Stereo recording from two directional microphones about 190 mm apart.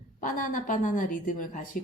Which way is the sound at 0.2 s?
45° left (ahead or behind).